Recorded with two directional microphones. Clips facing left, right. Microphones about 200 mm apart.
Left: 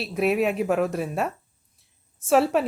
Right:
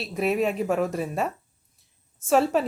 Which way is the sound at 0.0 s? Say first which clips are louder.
Left 2 dB; centre (ahead or behind).